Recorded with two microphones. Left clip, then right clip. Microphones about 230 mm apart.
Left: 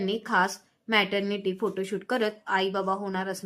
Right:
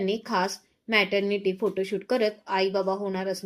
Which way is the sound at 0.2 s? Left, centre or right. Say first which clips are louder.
Left 2 dB; centre.